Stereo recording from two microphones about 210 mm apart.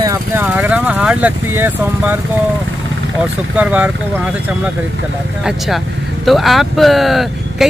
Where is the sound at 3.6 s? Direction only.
5° right (ahead or behind).